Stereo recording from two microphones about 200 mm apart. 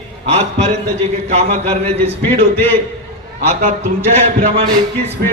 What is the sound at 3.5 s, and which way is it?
Speech, 35° right (ahead or behind).